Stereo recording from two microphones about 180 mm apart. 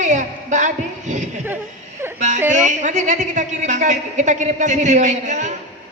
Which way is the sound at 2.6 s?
40° right (ahead or behind).